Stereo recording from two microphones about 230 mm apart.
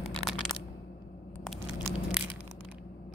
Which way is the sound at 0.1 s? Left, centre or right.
Centre.